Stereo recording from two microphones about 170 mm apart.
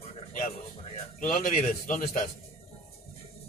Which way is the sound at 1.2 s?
50° left (ahead or behind).